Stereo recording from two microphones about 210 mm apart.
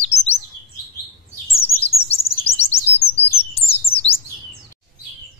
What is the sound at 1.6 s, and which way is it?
Chirp, 30° left (ahead or behind).